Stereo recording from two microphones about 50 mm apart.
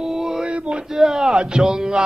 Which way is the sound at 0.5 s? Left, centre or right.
Right.